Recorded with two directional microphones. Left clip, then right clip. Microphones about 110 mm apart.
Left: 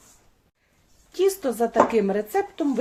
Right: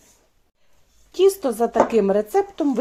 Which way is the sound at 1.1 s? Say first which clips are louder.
Right 5 dB; 40° right (ahead or behind).